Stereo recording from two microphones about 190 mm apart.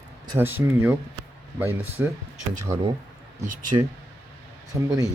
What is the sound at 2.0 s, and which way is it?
Speech, 10° right (ahead or behind).